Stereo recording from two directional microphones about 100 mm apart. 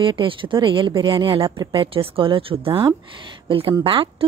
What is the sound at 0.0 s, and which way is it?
A woman's voice, 60° right (ahead or behind).